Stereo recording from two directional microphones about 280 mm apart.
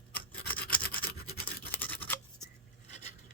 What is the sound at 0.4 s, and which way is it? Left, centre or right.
Toothbrush, centre.